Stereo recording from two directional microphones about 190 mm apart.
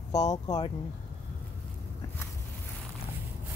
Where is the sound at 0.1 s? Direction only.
20° left (ahead or behind).